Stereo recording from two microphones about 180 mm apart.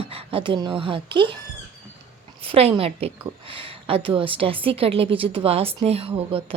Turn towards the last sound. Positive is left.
turn(degrees=-30)  # may be behind; listen again after turning